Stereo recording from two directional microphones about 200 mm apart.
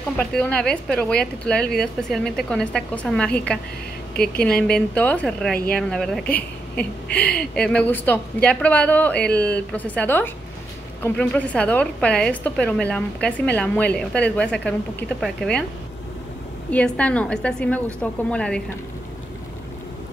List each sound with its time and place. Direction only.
0.2 s a woman's voice: 5° left (ahead or behind)
4.7 s a woman's voice: 5° left (ahead or behind)
7.1 s speech: 55° left (ahead or behind)
7.3 s a woman's voice: 5° left (ahead or behind)
16.7 s a woman's voice: 5° left (ahead or behind)